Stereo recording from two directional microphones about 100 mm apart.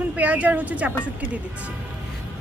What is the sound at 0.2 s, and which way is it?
Speech, 15° right (ahead or behind).